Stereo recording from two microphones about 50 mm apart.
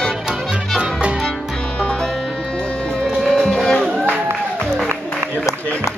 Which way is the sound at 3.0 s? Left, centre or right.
Centre.